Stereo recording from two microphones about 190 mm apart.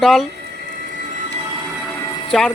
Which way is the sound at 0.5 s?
45° right (ahead or behind).